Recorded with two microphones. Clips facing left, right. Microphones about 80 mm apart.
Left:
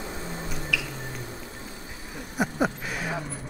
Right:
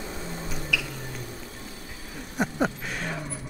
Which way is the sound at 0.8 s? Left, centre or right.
Left.